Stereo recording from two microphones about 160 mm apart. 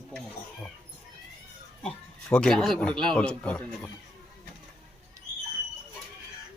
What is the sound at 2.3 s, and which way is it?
Speech, 5° left (ahead or behind).